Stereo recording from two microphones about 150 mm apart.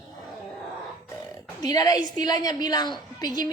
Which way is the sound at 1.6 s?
25° left (ahead or behind).